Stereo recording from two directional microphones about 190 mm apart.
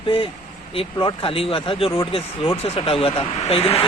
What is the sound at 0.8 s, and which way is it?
Speech, 25° left (ahead or behind).